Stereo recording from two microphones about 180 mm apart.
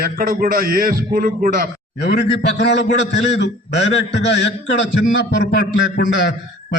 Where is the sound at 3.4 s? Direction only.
75° left (ahead or behind).